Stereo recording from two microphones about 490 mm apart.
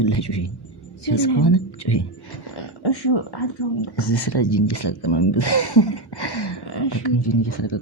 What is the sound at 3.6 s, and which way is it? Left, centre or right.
Speech, left.